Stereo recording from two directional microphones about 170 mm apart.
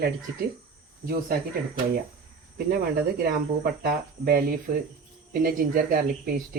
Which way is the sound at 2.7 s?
60° right (ahead or behind).